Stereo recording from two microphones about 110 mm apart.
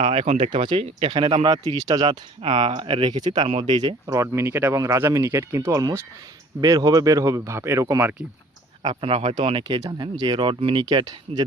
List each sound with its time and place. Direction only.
0.0 s speech: 60° right (ahead or behind)
0.5 s speech: 50° right (ahead or behind)
1.9 s speech: 40° right (ahead or behind)
2.4 s speech: 55° right (ahead or behind); by 8.0 s 25° right (ahead or behind)
9.0 s speech: 55° right (ahead or behind); by 11.4 s 40° right (ahead or behind)